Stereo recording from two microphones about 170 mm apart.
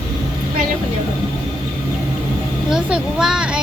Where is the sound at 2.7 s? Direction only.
5° right (ahead or behind).